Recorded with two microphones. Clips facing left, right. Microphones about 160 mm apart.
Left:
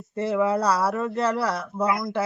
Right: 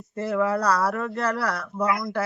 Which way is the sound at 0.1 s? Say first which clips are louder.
Left 1 dB; 20° left (ahead or behind).